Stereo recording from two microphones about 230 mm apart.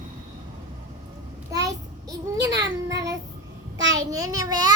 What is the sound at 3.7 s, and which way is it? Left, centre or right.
Child singing, right.